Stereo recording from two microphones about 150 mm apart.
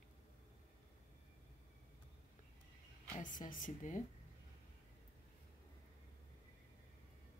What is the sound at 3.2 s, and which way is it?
Speech, 60° left (ahead or behind).